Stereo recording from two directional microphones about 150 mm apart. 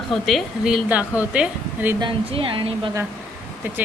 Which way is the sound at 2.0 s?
35° right (ahead or behind).